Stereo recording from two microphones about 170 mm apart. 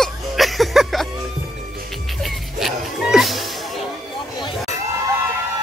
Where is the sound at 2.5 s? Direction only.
Centre (ahead or behind).